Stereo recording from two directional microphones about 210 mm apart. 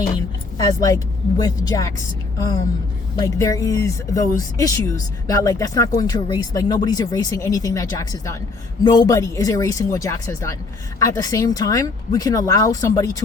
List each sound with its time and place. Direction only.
0.7 s speech: 15° left (ahead or behind)
3.2 s speech: 15° left (ahead or behind)